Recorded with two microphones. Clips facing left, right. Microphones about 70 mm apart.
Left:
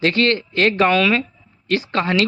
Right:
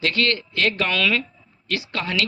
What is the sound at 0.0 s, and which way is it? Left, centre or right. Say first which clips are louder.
A man's voice: left 5 dB; left.